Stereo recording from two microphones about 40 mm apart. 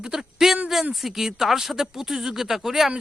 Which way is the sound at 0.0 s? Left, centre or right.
Centre.